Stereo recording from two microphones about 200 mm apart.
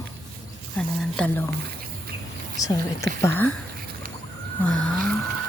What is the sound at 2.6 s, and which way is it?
Speech, 20° left (ahead or behind).